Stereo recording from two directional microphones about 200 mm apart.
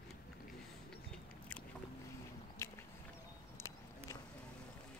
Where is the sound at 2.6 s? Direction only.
15° left (ahead or behind).